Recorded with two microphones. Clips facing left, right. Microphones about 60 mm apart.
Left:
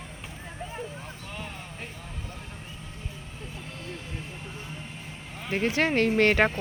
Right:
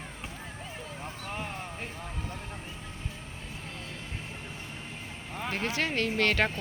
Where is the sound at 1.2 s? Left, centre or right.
Right.